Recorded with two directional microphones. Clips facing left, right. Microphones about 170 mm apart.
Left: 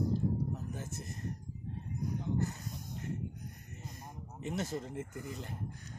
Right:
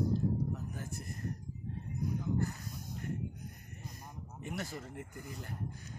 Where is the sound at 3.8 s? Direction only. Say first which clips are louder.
Left 1 dB; 25° left (ahead or behind).